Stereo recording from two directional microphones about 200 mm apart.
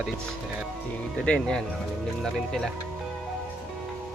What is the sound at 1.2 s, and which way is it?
Speech, 5° left (ahead or behind).